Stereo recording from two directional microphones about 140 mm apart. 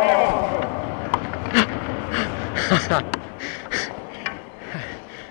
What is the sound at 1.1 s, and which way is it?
Bee, 15° left (ahead or behind).